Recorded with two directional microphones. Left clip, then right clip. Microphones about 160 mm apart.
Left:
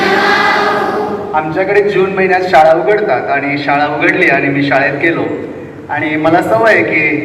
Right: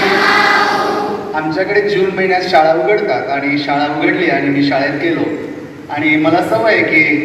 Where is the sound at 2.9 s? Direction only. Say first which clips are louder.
Left 2 dB; 15° right (ahead or behind).